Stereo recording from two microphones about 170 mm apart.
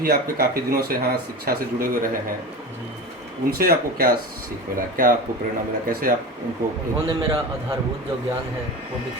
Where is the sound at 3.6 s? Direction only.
60° right (ahead or behind).